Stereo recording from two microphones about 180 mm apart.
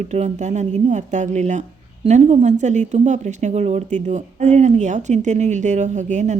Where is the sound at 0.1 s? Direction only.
40° right (ahead or behind).